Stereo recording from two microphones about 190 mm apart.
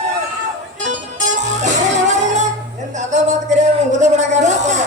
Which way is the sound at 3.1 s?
40° right (ahead or behind).